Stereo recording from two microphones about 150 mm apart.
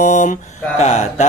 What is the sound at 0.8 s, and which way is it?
Mantra, 50° left (ahead or behind).